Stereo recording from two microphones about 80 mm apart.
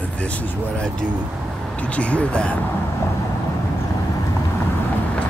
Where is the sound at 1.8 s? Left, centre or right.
Centre.